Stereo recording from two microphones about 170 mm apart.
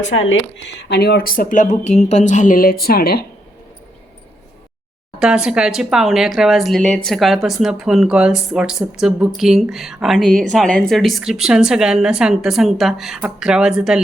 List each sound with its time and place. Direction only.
0.0 s speech: 90° left; by 3.2 s 65° left (ahead or behind)
5.2 s speech: 5° right (ahead or behind)